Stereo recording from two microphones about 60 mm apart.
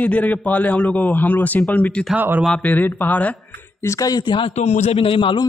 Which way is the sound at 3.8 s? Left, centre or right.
Left.